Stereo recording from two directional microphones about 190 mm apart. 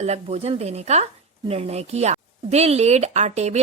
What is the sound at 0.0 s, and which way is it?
Speech, 35° right (ahead or behind).